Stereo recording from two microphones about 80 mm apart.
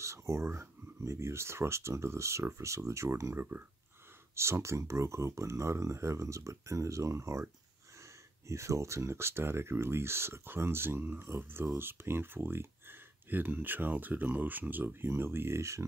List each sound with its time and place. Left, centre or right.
0.0 s speech: right